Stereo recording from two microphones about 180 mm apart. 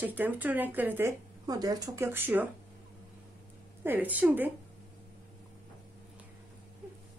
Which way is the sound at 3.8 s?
10° right (ahead or behind).